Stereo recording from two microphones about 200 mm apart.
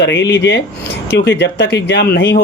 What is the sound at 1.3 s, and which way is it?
Speech, 60° left (ahead or behind).